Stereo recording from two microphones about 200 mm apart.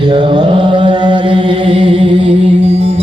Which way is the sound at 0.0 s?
25° right (ahead or behind).